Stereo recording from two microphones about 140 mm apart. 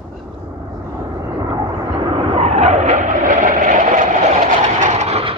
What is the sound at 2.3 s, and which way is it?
Vehicle, 50° right (ahead or behind).